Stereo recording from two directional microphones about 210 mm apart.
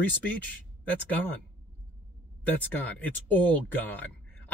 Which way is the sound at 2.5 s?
10° left (ahead or behind).